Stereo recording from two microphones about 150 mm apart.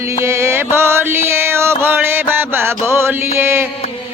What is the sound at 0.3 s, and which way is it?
Music, 15° right (ahead or behind).